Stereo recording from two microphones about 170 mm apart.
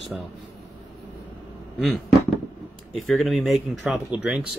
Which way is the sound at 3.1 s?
Centre (ahead or behind).